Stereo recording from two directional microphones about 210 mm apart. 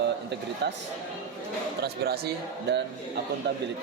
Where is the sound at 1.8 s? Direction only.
50° right (ahead or behind).